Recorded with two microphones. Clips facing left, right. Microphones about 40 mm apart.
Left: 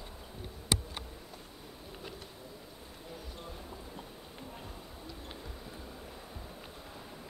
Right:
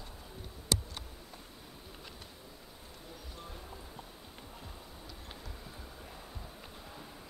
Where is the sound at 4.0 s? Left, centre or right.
Centre.